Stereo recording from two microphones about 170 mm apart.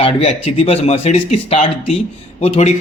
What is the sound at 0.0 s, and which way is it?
A man's voice, 35° left (ahead or behind).